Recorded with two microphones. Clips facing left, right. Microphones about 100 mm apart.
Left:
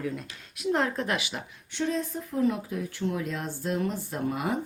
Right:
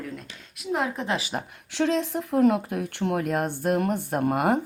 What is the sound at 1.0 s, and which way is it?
Speech, 30° right (ahead or behind).